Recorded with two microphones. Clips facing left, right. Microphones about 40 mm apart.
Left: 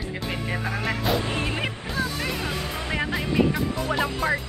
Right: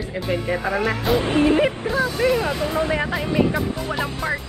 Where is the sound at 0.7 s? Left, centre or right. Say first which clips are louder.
Right 7 dB; right.